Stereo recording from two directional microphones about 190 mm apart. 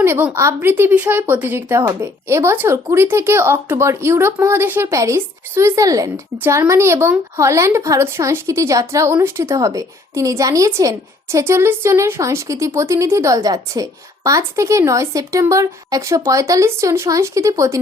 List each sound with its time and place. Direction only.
0.0 s speech: 10° right (ahead or behind)